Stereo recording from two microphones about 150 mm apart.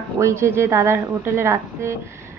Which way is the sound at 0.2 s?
20° right (ahead or behind).